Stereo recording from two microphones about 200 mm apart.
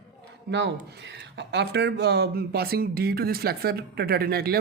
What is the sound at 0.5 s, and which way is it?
Speech, 60° right (ahead or behind).